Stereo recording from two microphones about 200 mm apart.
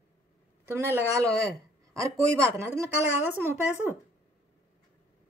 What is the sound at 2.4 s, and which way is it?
Speech, 15° right (ahead or behind).